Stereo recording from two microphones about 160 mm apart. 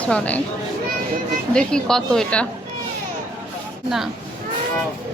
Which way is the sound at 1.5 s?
5° left (ahead or behind).